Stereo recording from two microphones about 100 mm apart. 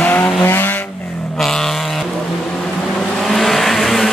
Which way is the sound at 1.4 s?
5° left (ahead or behind).